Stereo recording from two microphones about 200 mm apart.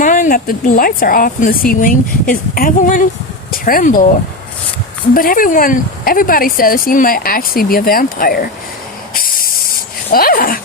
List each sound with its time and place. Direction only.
0.0 s speech: 40° left (ahead or behind)
5.1 s speech: 45° left (ahead or behind)
9.1 s hiss: 45° left (ahead or behind)
10.1 s speech: 45° left (ahead or behind)